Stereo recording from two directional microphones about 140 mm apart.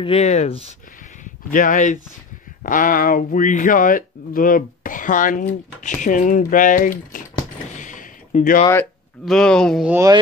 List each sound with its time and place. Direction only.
0.0 s speech: 45° left (ahead or behind)
1.2 s speech: 70° left (ahead or behind)
2.6 s speech: 80° left
7.7 s a sound: 65° left (ahead or behind)
9.2 s speech: 5° left (ahead or behind)
9.8 s speech: 20° right (ahead or behind)